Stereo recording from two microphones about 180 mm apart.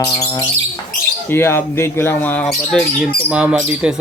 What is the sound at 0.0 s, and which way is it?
Speech, 20° left (ahead or behind).